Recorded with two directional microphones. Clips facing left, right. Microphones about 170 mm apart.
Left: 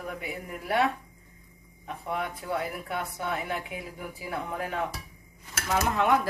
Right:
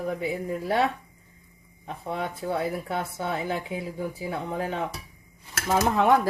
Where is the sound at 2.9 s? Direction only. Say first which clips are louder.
Right 3 dB; 30° right (ahead or behind).